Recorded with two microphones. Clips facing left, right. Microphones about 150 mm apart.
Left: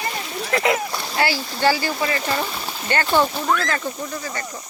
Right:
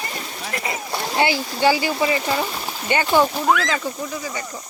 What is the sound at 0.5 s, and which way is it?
Speech, 90° left.